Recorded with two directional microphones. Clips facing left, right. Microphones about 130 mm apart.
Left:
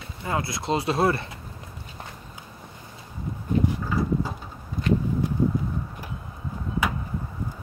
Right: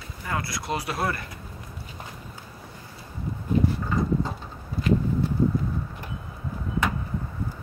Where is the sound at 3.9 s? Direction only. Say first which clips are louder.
Even; 5° left (ahead or behind).